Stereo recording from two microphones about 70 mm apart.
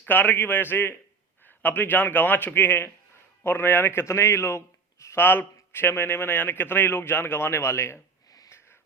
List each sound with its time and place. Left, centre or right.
0.1 s a man's voice: left
5.2 s a man's voice: left